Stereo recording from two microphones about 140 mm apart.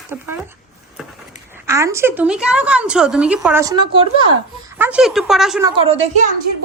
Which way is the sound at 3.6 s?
30° right (ahead or behind).